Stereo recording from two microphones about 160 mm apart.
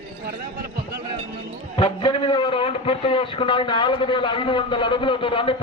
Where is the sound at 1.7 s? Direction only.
30° left (ahead or behind).